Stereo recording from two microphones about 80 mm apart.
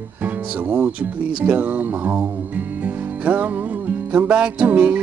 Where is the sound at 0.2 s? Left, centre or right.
Right.